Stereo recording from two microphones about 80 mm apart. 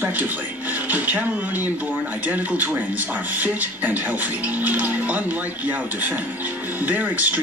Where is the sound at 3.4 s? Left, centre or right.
Right.